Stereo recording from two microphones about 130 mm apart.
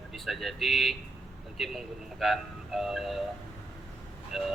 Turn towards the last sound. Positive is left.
turn(degrees=0)  # may be behind; listen again after turning